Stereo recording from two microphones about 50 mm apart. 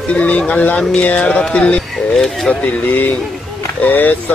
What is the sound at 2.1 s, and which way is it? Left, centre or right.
Speech, centre.